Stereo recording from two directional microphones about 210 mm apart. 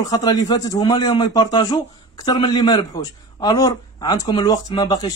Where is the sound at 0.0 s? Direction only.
15° left (ahead or behind).